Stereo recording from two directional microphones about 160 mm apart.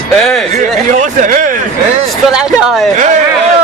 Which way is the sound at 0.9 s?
55° right (ahead or behind).